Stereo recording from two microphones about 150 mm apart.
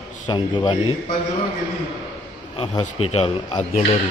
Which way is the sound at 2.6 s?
40° left (ahead or behind).